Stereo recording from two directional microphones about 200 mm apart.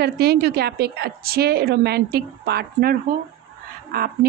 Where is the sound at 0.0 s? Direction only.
55° right (ahead or behind).